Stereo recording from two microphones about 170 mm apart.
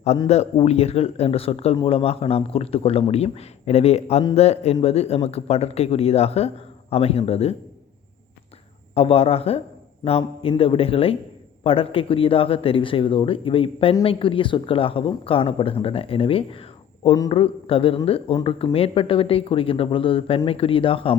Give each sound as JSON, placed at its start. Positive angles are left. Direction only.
{"t": 0.3, "sound": "speech", "side_deg": 40}
{"t": 9.0, "sound": "speech", "side_deg": 35}